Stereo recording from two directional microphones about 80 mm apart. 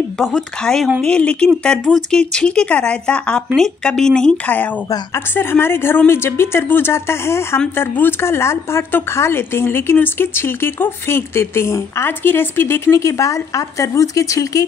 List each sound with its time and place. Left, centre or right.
0.3 s speech: centre
5.1 s a woman's voice: left